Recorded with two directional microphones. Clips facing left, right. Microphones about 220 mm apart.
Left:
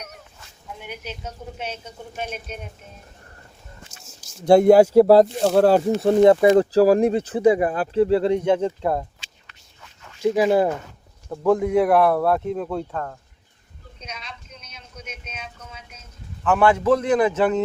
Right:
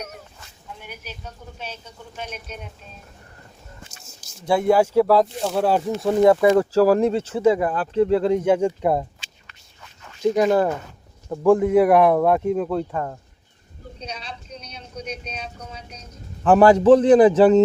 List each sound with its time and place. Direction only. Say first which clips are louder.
0.8 s speech: left 5 dB; 20° left (ahead or behind)
2.2 s speech: left 3 dB; 55° left (ahead or behind)
4.5 s speech: left 5 dB; 40° left (ahead or behind)
5.6 s speech: left 4 dB; 35° left (ahead or behind); by 9.0 s 15° right (ahead or behind)
10.2 s speech: even; 5° left (ahead or behind)
11.3 s speech: right 3 dB; 5° right (ahead or behind)
14.0 s vehicle: right 3 dB; 35° right (ahead or behind)